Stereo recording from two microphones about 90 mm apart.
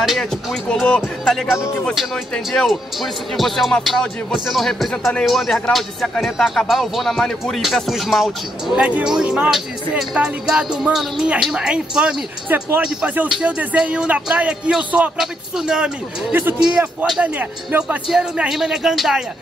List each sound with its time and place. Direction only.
0.0 s speech: centre (ahead or behind)
0.7 s speech: 10° left (ahead or behind); by 12.2 s 10° right (ahead or behind)
12.4 s speech: 20° right (ahead or behind); by 17.2 s 5° right (ahead or behind)
17.2 s speech: 15° right (ahead or behind)
18.5 s speech: 5° right (ahead or behind)